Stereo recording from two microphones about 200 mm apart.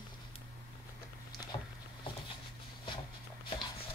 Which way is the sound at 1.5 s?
25° left (ahead or behind).